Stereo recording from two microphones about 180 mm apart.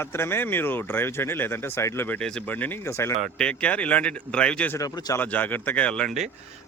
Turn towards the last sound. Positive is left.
turn(degrees=0)  # may be behind; listen again after turning